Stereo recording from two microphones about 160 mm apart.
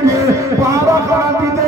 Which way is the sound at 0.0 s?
20° right (ahead or behind).